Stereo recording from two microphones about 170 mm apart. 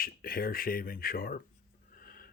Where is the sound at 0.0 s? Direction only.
60° left (ahead or behind).